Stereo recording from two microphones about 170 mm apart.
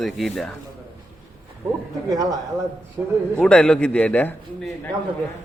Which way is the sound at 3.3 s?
5° left (ahead or behind).